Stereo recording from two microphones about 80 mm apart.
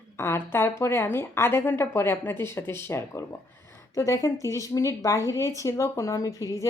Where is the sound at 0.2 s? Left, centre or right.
Left.